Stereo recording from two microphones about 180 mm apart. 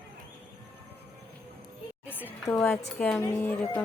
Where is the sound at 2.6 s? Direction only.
5° left (ahead or behind).